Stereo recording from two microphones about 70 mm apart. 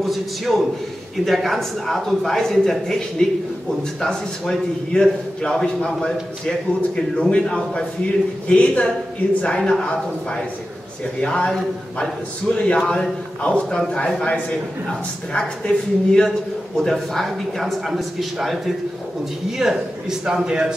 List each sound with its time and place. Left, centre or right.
0.0 s a man's voice: centre
9.6 s a man's voice: centre
11.1 s a man's voice: centre
12.6 s a man's voice: centre
16.3 s a man's voice: centre
19.6 s a man's voice: centre